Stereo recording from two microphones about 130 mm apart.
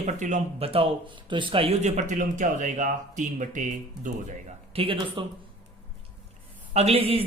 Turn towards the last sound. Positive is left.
turn(degrees=-50)  # may be behind; listen again after turning